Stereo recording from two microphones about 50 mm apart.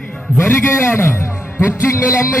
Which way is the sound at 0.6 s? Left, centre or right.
Left.